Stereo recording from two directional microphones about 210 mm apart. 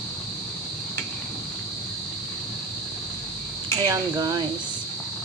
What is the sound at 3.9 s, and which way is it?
Speech, 15° right (ahead or behind).